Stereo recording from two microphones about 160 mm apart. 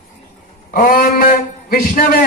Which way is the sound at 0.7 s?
55° left (ahead or behind).